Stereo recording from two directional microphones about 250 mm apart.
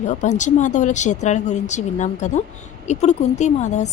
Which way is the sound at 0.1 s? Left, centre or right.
Left.